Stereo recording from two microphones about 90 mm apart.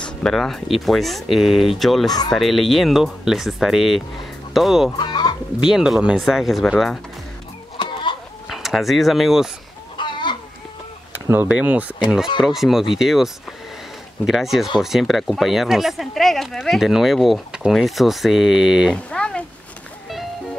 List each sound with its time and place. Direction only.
0.0 s speech: 5° left (ahead or behind)
2.0 s speech: 45° left (ahead or behind)
2.3 s speech: centre (ahead or behind)
4.9 s fowl: 55° left (ahead or behind)
5.6 s speech: 5° right (ahead or behind)
7.7 s chicken: 65° left (ahead or behind)
8.5 s speech: centre (ahead or behind)
9.9 s chicken: 60° left (ahead or behind)
11.4 s speech: 15° right (ahead or behind)
12.5 s speech: 5° right (ahead or behind)
18.9 s speech: 10° left (ahead or behind)